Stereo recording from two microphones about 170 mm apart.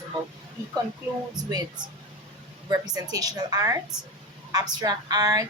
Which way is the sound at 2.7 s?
20° right (ahead or behind).